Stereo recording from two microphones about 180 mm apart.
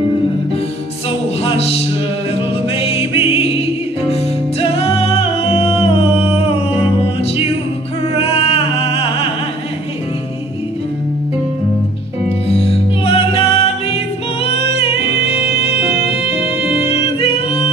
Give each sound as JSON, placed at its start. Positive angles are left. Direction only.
{"t": 1.4, "sound": "music", "side_deg": 35}
{"t": 8.2, "sound": "music", "side_deg": 35}
{"t": 12.4, "sound": "music", "side_deg": 35}